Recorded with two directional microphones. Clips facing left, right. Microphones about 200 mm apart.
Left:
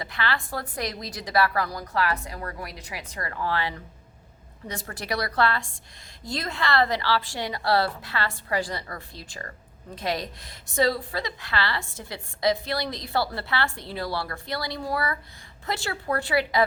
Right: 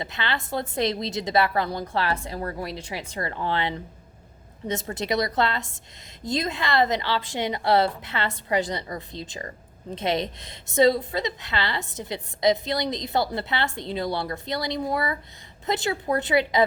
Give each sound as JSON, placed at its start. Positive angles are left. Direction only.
{"t": 0.0, "sound": "a woman's voice", "side_deg": -20}